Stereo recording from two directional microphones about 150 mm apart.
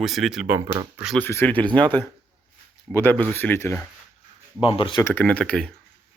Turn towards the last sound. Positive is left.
turn(degrees=5)  # may be behind; listen again after turning